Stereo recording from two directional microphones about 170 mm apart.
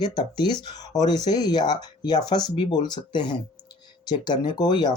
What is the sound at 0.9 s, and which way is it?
Speech, 25° left (ahead or behind).